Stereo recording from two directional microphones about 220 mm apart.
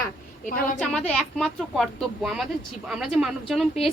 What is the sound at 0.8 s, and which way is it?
Speech, 5° left (ahead or behind).